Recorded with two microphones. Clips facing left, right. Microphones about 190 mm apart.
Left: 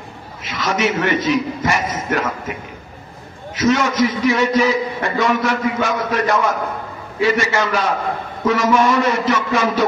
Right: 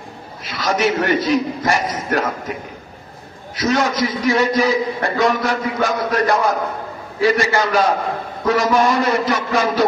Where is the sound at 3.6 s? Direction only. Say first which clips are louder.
Left 2 dB; 35° right (ahead or behind).